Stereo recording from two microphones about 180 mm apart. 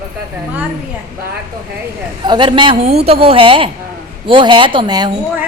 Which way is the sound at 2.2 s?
25° right (ahead or behind).